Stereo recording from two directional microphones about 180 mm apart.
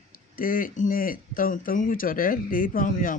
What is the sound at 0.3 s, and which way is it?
Speech, 50° left (ahead or behind).